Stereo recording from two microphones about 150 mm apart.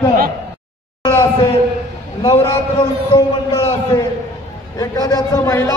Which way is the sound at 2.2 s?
20° left (ahead or behind).